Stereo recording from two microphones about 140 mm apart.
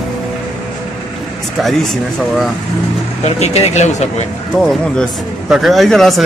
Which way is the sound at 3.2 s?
50° left (ahead or behind).